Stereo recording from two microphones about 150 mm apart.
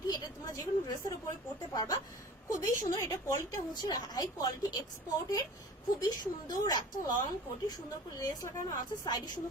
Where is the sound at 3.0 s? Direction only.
20° left (ahead or behind).